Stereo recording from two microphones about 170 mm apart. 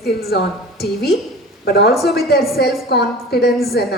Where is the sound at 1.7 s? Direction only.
65° left (ahead or behind).